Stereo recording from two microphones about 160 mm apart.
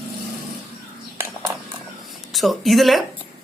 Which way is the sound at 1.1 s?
15° right (ahead or behind).